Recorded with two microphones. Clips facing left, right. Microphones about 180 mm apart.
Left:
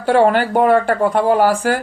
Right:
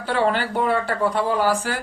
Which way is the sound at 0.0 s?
50° left (ahead or behind).